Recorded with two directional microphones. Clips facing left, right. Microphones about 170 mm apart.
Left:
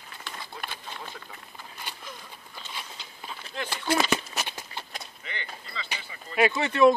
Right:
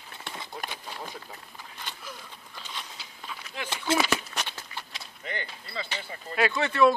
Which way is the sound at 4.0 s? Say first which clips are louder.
Left 1 dB; centre (ahead or behind).